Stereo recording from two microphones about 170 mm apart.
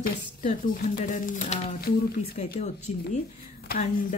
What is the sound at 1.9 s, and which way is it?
Speech, 60° left (ahead or behind).